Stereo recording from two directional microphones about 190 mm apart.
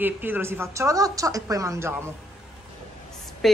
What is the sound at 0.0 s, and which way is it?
Speech, 10° right (ahead or behind).